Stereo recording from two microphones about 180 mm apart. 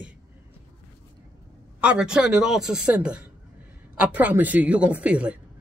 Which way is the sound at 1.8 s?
5° right (ahead or behind).